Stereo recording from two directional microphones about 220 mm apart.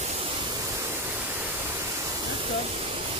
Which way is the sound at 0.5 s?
10° right (ahead or behind).